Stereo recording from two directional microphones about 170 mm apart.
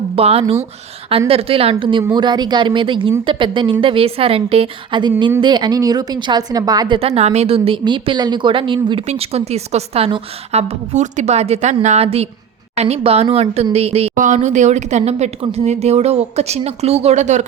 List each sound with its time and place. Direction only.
0.2 s a woman's voice: 35° right (ahead or behind)